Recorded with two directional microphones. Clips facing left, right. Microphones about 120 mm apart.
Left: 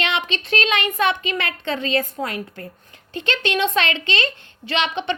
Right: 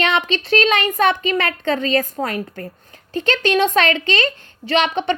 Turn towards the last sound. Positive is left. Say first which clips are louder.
# right 5 dB
turn(degrees=-45)  # may be behind; listen again after turning